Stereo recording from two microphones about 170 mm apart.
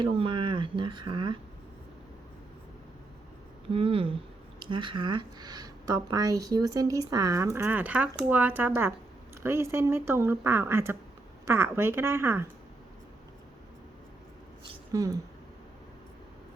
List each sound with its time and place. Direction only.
0.0 s speech: 30° right (ahead or behind)
3.7 s speech: 30° right (ahead or behind); by 12.5 s 15° right (ahead or behind)
14.9 s speech: 20° right (ahead or behind)